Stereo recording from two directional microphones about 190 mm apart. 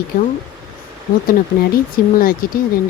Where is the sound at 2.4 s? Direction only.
50° left (ahead or behind).